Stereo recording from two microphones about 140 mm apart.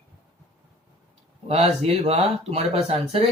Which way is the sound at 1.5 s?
45° right (ahead or behind).